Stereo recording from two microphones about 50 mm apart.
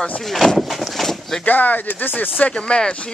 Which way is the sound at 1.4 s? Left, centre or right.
Left.